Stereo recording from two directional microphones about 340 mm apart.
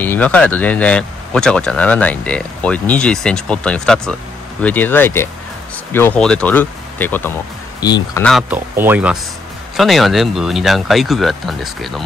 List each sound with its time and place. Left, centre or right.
0.0 s speech: centre